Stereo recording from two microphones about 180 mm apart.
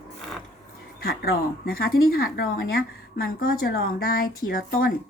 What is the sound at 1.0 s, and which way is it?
Speech, 55° left (ahead or behind).